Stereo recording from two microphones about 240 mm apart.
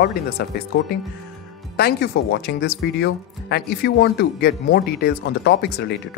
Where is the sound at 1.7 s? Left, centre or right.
Left.